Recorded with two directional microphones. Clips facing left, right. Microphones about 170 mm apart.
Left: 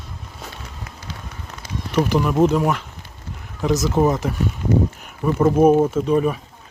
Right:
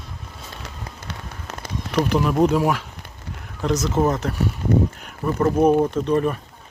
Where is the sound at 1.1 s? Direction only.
75° right (ahead or behind).